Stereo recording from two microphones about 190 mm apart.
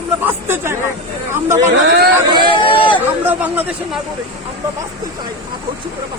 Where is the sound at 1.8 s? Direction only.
60° right (ahead or behind).